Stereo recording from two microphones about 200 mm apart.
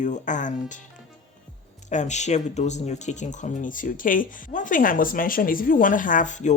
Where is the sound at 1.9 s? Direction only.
35° left (ahead or behind).